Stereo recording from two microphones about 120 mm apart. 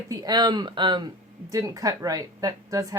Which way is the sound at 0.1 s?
35° right (ahead or behind).